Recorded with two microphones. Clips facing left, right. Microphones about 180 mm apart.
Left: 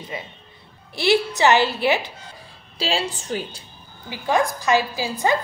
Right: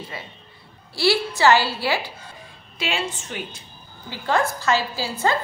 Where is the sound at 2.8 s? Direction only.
35° left (ahead or behind).